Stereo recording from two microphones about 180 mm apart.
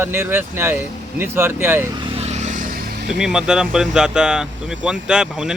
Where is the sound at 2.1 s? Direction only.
40° right (ahead or behind); by 3.1 s 55° right (ahead or behind).